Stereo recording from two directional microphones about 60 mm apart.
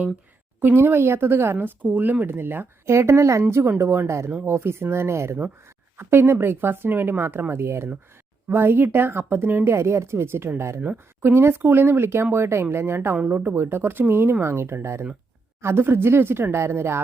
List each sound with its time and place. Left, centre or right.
0.6 s speech: right
9.7 s speech: right